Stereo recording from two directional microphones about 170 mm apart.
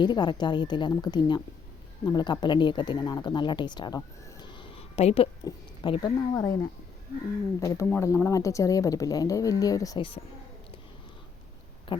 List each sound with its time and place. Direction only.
0.0 s a woman's voice: 25° left (ahead or behind)
11.9 s speech: 30° left (ahead or behind)